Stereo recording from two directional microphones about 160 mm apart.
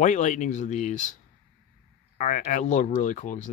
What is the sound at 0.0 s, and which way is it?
Speech, 50° left (ahead or behind).